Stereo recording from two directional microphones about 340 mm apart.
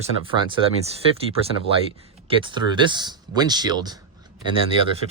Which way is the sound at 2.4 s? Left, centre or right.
Centre.